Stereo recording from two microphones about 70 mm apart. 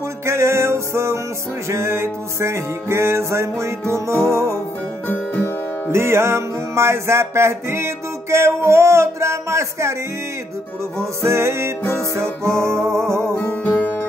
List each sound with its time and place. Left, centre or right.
0.2 s music: right
5.0 s music: left
5.9 s music: right
11.0 s music: right
13.5 s music: left